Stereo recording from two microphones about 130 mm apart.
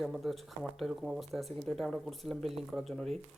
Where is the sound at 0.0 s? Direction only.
Centre (ahead or behind).